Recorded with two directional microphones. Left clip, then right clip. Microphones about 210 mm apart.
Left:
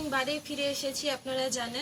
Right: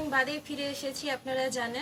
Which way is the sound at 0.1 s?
15° right (ahead or behind).